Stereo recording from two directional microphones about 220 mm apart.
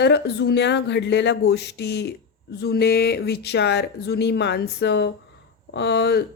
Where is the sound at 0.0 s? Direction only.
50° left (ahead or behind).